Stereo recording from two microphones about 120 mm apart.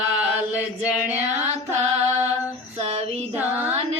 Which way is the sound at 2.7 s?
55° right (ahead or behind).